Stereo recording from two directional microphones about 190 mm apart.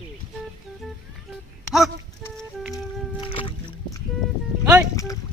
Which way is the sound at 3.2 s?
25° left (ahead or behind).